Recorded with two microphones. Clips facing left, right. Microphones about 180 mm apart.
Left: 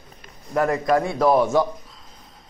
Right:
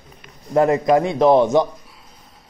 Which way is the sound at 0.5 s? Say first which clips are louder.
Right 5 dB; 20° right (ahead or behind).